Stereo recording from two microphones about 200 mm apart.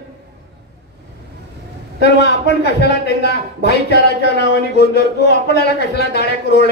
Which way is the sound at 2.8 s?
55° left (ahead or behind).